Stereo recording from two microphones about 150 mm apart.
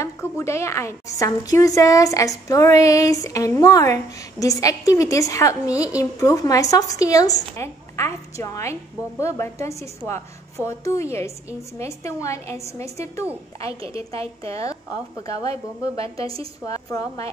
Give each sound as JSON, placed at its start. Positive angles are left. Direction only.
{"t": 0.0, "sound": "a woman's voice", "side_deg": 20}
{"t": 13.7, "sound": "a woman's voice", "side_deg": -40}
{"t": 14.4, "sound": "a woman's voice", "side_deg": 20}